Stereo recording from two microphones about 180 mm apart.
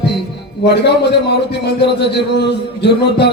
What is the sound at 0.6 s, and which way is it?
A man's voice, 70° left (ahead or behind).